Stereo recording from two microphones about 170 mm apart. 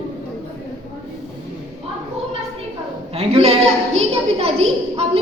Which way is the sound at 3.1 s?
35° right (ahead or behind).